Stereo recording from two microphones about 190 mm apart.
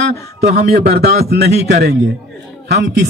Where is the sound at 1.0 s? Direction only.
60° right (ahead or behind).